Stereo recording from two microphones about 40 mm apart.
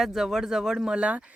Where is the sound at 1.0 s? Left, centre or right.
Right.